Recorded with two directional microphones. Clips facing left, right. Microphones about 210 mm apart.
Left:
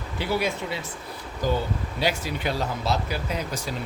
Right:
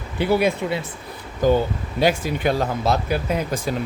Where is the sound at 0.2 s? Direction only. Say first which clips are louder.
Right 7 dB; 55° right (ahead or behind).